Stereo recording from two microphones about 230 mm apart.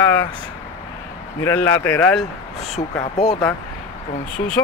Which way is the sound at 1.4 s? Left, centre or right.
Centre.